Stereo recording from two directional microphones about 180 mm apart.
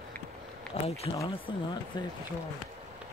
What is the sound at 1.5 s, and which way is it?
Speech, 25° left (ahead or behind).